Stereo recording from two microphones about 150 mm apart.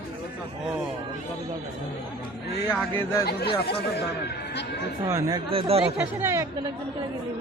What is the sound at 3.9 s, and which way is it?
Speech, 90° left.